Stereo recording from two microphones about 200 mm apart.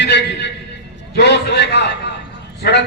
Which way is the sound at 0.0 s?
60° left (ahead or behind).